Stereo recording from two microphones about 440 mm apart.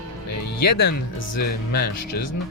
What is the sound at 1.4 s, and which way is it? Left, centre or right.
Speech, left.